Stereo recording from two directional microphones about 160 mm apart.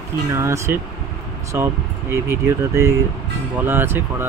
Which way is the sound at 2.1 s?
15° right (ahead or behind).